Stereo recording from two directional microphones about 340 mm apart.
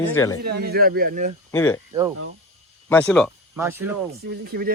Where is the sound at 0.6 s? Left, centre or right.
Right.